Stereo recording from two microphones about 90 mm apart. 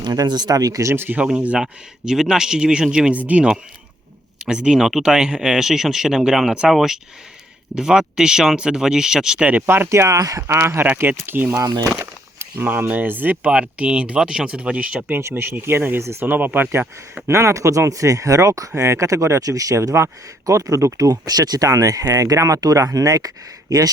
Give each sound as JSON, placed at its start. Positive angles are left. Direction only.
{"t": 0.0, "sound": "speech", "side_deg": -50}
{"t": 1.2, "sound": "speech", "side_deg": -15}
{"t": 9.5, "sound": "speech", "side_deg": -20}
{"t": 15.1, "sound": "speech", "side_deg": -30}
{"t": 17.2, "sound": "speech", "side_deg": -30}